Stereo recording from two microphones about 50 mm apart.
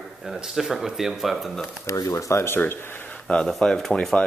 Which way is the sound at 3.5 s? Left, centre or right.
Centre.